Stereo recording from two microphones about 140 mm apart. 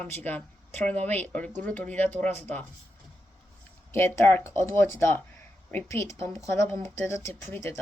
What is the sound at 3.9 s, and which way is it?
Speech, 20° left (ahead or behind).